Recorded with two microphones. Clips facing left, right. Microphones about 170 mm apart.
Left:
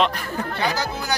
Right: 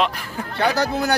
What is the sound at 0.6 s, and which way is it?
Speech, 65° right (ahead or behind).